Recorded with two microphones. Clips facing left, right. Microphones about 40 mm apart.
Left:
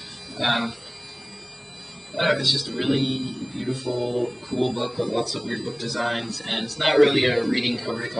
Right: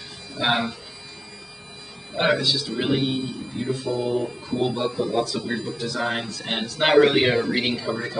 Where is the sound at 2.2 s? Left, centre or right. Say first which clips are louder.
Right 1 dB; centre.